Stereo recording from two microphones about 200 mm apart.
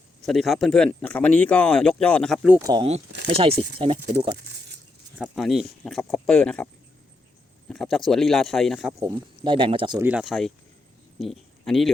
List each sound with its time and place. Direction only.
0.3 s speech: centre (ahead or behind)
2.6 s speech: 20° right (ahead or behind)
3.2 s speech: 30° right (ahead or behind)
5.1 s speech: centre (ahead or behind)
7.7 s speech: centre (ahead or behind)
8.9 s speech: 20° right (ahead or behind)
10.0 s speech: 5° right (ahead or behind)